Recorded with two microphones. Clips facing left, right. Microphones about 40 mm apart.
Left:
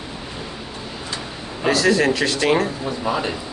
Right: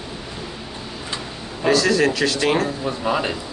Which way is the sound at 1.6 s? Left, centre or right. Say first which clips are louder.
Even; centre.